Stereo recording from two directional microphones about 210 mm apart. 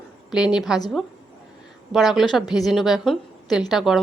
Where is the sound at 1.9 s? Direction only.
Centre (ahead or behind).